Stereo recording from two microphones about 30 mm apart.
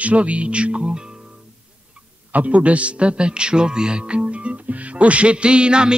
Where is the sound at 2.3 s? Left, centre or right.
Right.